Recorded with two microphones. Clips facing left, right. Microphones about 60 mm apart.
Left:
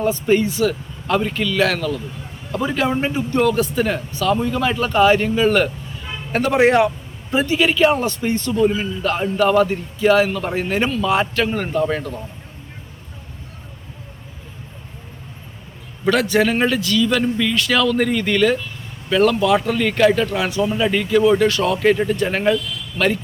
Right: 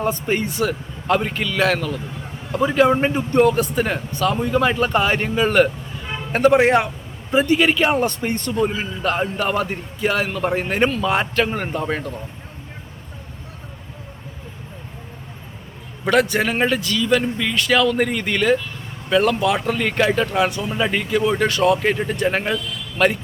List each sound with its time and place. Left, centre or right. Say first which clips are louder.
0.0 s a man's voice: left 4 dB; right
7.4 s a man's voice: left 3 dB; right
8.6 s a man's voice: left 4 dB; centre
16.0 s a man's voice: left 1 dB; right